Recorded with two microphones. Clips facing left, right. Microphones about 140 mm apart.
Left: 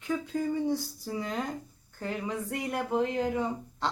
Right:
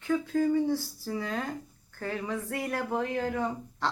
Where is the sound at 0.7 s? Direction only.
15° left (ahead or behind).